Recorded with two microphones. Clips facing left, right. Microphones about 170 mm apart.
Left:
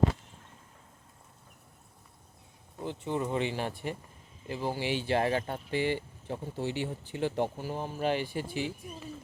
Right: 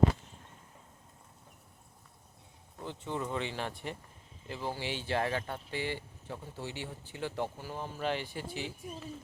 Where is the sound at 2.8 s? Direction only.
15° left (ahead or behind).